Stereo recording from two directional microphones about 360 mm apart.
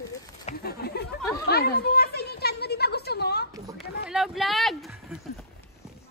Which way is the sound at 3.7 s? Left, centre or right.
Centre.